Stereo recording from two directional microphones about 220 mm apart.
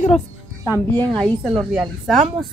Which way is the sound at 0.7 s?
5° left (ahead or behind).